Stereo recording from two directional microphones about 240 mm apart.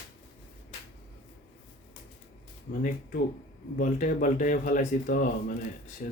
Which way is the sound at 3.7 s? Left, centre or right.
Left.